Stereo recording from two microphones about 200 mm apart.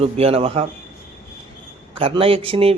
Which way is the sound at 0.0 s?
30° right (ahead or behind).